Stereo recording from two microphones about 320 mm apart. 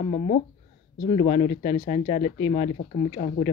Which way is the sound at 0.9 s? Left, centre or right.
Centre.